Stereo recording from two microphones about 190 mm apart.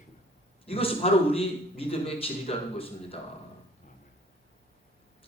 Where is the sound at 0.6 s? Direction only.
30° left (ahead or behind).